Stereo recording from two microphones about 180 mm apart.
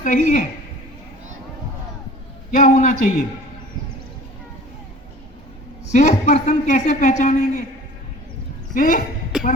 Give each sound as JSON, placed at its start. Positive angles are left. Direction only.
{"t": 0.0, "sound": "a man's voice", "side_deg": 45}
{"t": 2.5, "sound": "a man's voice", "side_deg": 45}
{"t": 5.9, "sound": "a woman's voice", "side_deg": 40}
{"t": 8.7, "sound": "a man's voice", "side_deg": 45}
{"t": 9.3, "sound": "a sound", "side_deg": 0}